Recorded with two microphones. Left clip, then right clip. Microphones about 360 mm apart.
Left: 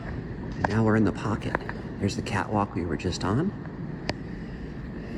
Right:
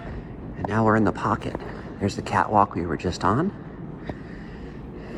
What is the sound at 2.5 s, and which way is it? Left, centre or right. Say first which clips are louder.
Speech: right 9 dB; right.